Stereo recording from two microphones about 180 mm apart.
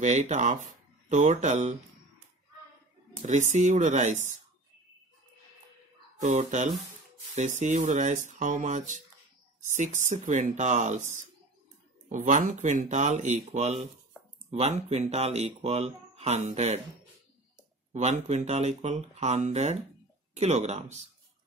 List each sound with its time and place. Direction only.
0.0 s speech: 40° right (ahead or behind)
3.2 s speech: 40° right (ahead or behind)
6.2 s speech: 40° right (ahead or behind)
17.9 s speech: 40° right (ahead or behind)